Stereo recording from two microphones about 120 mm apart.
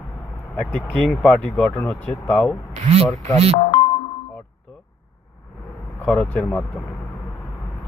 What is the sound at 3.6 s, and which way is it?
Music, 80° left.